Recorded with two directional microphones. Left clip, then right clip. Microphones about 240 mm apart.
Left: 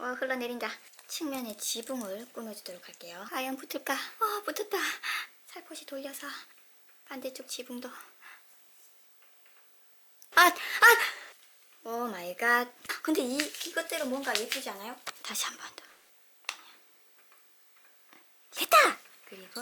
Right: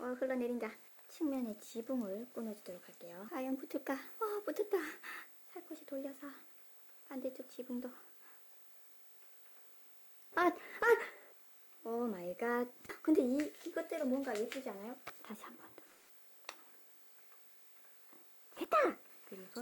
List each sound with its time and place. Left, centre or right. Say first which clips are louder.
0.0 s speech: left 5 dB; centre
1.9 s speech: left 4 dB; centre
2.6 s speech: left 6 dB; centre
7.7 s speech: left 3 dB; centre
10.3 s speech: left 12 dB; centre
12.1 s speech: left 10 dB; centre
16.5 s tick: left 12 dB; centre
18.5 s sneeze: left 10 dB; centre